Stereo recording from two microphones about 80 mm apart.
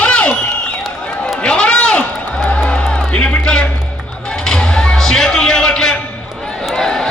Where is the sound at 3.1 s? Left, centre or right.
Centre.